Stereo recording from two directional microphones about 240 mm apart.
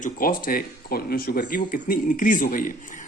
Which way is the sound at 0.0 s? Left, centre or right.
Left.